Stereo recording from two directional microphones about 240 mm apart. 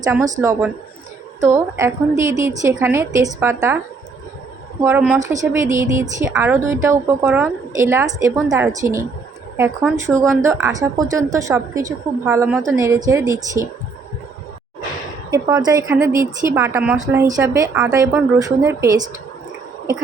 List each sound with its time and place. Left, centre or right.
0.0 s a woman's voice: centre
4.8 s a woman's voice: centre
15.3 s a woman's voice: centre